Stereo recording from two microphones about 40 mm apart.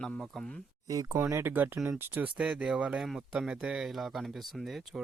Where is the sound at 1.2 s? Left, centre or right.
Right.